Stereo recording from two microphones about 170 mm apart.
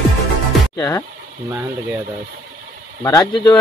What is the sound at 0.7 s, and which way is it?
Speech, 20° left (ahead or behind).